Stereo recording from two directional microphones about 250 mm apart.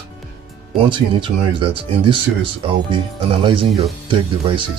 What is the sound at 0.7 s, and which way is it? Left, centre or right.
Speech, centre.